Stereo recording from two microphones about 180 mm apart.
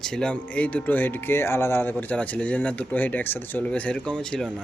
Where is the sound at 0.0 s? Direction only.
5° left (ahead or behind).